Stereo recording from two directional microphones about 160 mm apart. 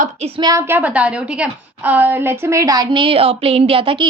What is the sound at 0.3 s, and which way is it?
A woman's voice, 20° right (ahead or behind).